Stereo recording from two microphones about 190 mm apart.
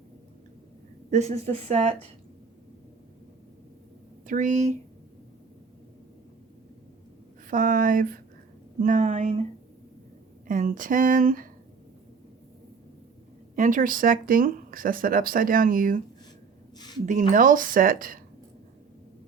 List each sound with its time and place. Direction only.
1.1 s speech: 35° right (ahead or behind)
4.3 s speech: 40° right (ahead or behind)
7.4 s speech: 45° right (ahead or behind)
10.4 s speech: 45° right (ahead or behind)
13.6 s speech: 45° right (ahead or behind)
17.1 s speech: 45° right (ahead or behind)